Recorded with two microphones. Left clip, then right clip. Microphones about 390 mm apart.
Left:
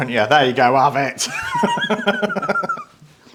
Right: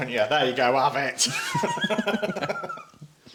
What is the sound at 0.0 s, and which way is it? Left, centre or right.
Speech, left.